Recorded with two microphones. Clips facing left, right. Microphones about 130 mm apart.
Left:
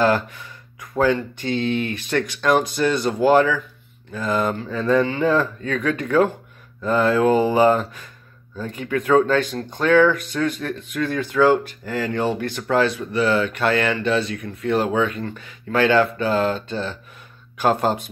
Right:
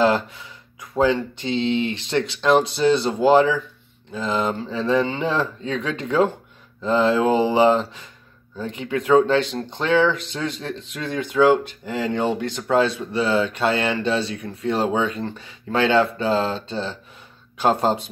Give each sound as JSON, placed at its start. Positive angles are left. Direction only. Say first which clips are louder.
{"t": 0.0, "sound": "speech", "louder": "even", "side_deg": -20}